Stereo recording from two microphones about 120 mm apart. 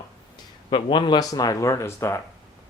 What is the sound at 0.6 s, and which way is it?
Speech, 40° left (ahead or behind).